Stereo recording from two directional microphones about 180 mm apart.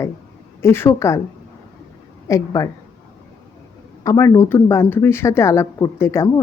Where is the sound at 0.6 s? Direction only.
15° left (ahead or behind).